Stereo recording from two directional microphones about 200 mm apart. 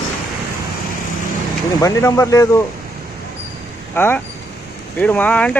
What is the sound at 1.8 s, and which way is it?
Speech, 15° left (ahead or behind).